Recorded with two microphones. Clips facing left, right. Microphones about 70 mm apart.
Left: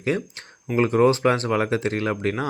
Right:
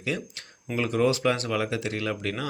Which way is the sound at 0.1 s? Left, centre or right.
Left.